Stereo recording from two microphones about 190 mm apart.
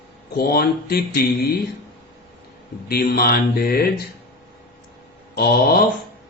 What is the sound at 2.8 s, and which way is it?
Speech, 55° left (ahead or behind).